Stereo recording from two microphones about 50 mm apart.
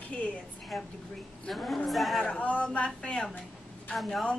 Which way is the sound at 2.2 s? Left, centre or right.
Left.